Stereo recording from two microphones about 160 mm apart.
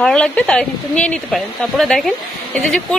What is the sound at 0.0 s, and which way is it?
Speech, 5° left (ahead or behind).